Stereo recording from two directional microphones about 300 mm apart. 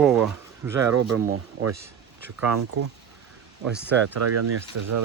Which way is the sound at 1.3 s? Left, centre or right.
Right.